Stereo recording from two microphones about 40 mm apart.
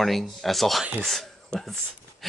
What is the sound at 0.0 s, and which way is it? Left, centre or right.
Speech, centre.